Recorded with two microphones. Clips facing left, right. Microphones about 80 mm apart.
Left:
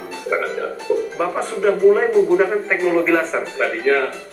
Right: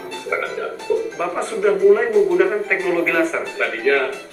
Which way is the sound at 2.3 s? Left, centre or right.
Left.